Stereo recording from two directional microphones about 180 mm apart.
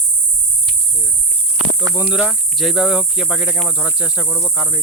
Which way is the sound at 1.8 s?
20° right (ahead or behind).